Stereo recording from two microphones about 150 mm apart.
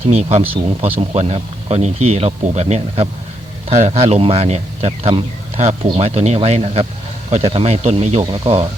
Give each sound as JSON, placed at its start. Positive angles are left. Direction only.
{"t": 0.1, "sound": "speech", "side_deg": -45}